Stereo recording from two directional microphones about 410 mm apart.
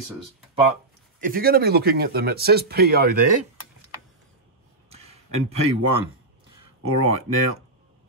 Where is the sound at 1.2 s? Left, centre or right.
Right.